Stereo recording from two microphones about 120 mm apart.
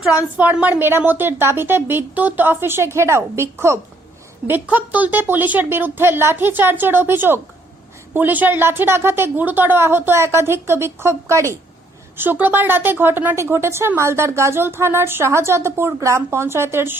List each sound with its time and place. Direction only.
0.1 s a woman's voice: 10° right (ahead or behind)